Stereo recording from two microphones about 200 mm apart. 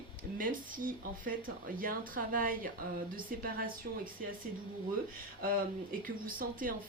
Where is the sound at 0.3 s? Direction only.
45° right (ahead or behind).